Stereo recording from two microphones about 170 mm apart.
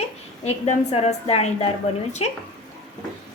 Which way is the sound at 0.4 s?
40° left (ahead or behind).